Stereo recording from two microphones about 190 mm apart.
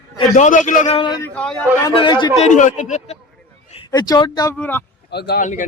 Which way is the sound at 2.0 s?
25° left (ahead or behind).